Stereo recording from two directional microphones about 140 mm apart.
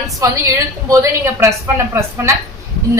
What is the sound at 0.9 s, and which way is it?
A woman's voice, 20° right (ahead or behind).